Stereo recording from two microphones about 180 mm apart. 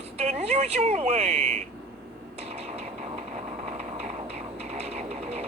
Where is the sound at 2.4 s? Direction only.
35° right (ahead or behind).